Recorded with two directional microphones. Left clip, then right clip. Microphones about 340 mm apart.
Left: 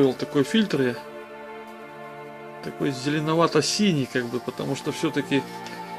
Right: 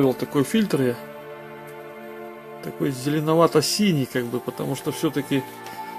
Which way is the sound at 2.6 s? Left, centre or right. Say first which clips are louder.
Right 1 dB; right.